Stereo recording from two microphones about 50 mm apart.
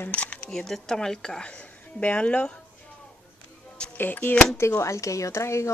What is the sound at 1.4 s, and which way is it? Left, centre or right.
Speech, left.